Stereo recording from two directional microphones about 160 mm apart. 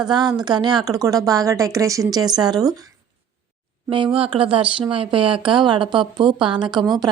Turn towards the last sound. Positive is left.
turn(degrees=-30)  # may be behind; listen again after turning